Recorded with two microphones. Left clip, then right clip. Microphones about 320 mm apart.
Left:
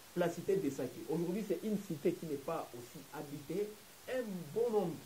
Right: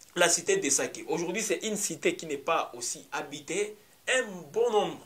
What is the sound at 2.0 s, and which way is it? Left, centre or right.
Speech, centre.